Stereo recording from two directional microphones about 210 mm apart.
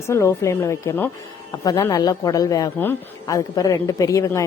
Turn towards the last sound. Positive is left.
turn(degrees=15)  # may be behind; listen again after turning